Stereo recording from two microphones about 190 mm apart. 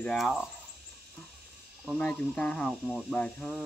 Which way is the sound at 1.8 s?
5° left (ahead or behind).